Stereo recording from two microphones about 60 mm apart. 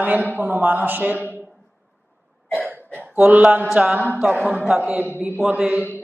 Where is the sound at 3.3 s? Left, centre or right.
Right.